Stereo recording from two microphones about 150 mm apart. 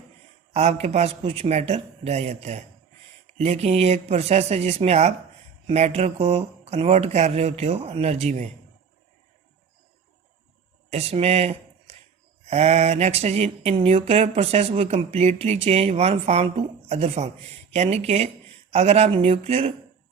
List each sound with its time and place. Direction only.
0.5 s mantra: 45° right (ahead or behind)
10.8 s speech: 45° right (ahead or behind)
12.5 s mantra: 45° right (ahead or behind)